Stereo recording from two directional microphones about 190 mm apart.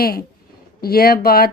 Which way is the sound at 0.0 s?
50° left (ahead or behind).